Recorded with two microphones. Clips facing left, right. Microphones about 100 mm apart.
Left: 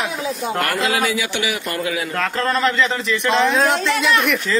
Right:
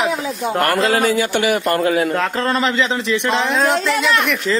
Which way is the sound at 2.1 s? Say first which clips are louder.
Right 2 dB; 30° right (ahead or behind).